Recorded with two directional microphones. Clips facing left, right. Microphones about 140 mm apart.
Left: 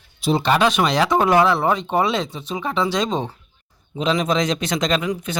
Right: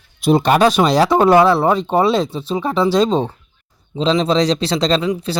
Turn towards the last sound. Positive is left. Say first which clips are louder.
# right 4 dB
turn(degrees=-30)  # may be behind; listen again after turning